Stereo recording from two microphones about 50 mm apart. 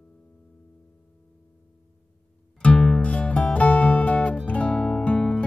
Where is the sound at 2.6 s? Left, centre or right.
Left.